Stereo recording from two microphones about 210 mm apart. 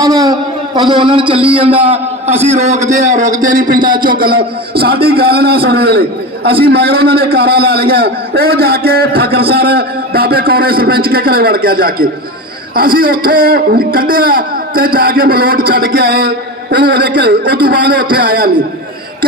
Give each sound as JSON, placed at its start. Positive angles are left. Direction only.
{"t": 0.8, "sound": "a man's voice", "side_deg": -20}